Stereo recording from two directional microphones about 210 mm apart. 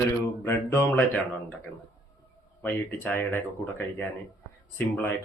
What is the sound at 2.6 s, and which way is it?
Speech, 10° left (ahead or behind).